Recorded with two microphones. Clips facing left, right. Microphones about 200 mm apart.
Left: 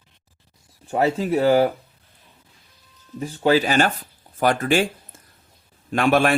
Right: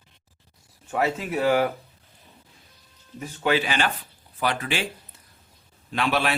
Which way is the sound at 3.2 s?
35° left (ahead or behind).